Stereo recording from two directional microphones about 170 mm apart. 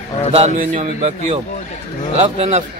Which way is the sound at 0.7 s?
40° right (ahead or behind).